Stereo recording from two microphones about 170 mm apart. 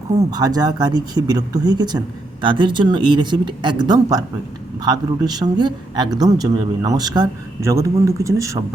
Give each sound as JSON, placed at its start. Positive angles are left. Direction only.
{"t": 0.2, "sound": "speech", "side_deg": -20}